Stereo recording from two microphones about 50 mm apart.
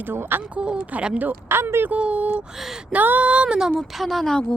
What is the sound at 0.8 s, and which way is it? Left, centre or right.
Speech, right.